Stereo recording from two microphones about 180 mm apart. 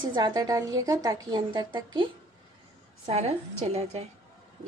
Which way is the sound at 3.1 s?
35° right (ahead or behind).